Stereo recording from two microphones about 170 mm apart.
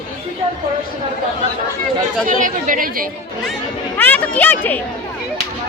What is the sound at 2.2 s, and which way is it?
Speech, 50° right (ahead or behind).